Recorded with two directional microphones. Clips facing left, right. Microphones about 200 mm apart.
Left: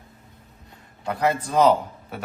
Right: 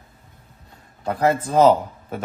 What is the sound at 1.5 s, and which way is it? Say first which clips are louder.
Speech: right 3 dB; 45° right (ahead or behind).